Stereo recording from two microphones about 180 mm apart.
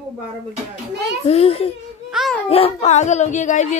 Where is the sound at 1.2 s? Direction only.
35° left (ahead or behind).